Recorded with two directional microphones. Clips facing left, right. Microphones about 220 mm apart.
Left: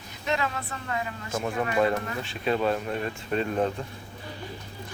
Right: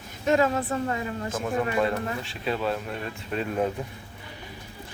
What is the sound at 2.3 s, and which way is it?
Speech, centre (ahead or behind).